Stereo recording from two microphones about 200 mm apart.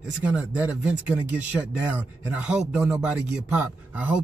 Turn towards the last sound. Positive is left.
turn(degrees=-5)  # may be behind; listen again after turning